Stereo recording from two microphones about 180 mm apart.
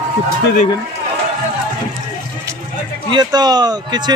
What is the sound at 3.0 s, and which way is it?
Speech, 25° right (ahead or behind).